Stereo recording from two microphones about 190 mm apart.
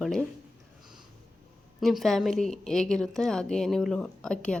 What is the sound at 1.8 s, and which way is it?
A woman's voice, centre (ahead or behind).